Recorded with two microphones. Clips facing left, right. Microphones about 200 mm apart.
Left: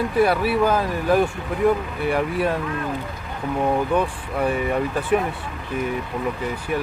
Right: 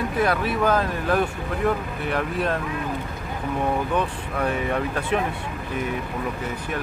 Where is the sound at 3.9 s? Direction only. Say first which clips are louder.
Left 3 dB; 10° left (ahead or behind).